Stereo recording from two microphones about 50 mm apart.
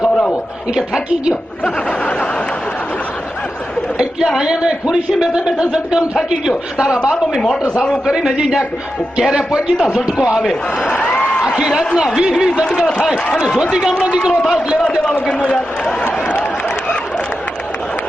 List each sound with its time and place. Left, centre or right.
1.6 s a man's voice: left
4.4 s a man's voice: centre
8.0 s a man's voice: centre
9.9 s a man's voice: centre
10.5 s a man's voice: centre
11.0 s a sound: left
11.4 s a sound: right
12.2 s a man's voice: centre
12.8 s a man's voice: centre
14.0 s speech: right
15.0 s a man's voice: left
16.2 s a sound: left